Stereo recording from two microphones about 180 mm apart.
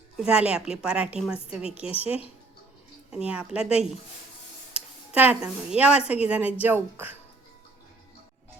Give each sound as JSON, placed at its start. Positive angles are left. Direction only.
{"t": 0.2, "sound": "a woman's voice", "side_deg": -5}
{"t": 3.2, "sound": "a woman's voice", "side_deg": -5}